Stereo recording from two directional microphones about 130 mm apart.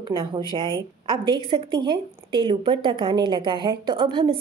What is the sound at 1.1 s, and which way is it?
A woman's voice, 40° right (ahead or behind).